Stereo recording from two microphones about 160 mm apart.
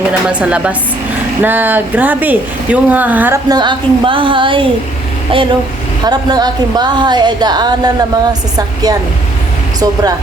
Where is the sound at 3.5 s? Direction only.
30° right (ahead or behind).